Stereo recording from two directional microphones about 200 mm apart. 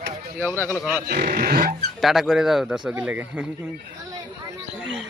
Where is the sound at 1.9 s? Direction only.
Centre (ahead or behind).